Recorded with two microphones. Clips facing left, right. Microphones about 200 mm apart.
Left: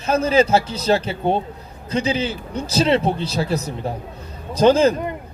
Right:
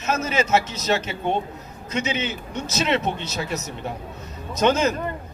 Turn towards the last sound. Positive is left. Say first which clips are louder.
# left 6 dB
turn(degrees=30)  # may be behind; listen again after turning